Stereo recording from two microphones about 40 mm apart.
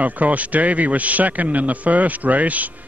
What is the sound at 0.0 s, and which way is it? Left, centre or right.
A man's voice, right.